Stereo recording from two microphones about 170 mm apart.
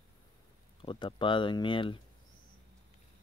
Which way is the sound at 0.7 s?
30° left (ahead or behind).